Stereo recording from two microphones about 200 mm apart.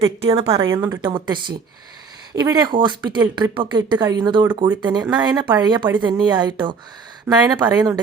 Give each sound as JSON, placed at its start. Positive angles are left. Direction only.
{"t": 0.0, "sound": "speech", "side_deg": -30}